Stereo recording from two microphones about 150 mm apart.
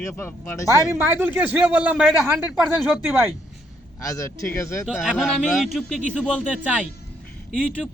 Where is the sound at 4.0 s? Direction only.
20° left (ahead or behind).